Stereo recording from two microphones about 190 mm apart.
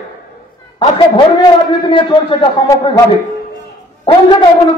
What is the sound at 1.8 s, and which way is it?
A man's voice, 25° left (ahead or behind).